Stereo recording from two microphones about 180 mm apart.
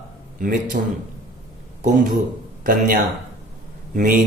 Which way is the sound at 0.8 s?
45° right (ahead or behind).